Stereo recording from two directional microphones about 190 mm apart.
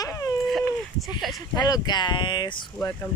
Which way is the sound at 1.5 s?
20° left (ahead or behind).